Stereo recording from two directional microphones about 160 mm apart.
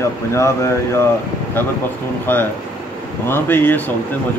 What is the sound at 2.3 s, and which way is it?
Speech, 15° left (ahead or behind).